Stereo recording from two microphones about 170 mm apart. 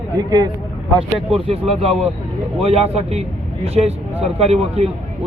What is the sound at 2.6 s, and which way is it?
Speech, 35° right (ahead or behind).